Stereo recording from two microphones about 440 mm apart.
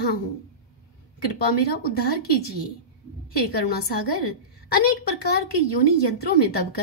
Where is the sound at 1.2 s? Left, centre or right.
Left.